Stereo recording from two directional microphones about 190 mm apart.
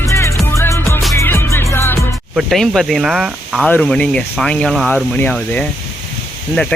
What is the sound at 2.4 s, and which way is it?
Speech, centre (ahead or behind).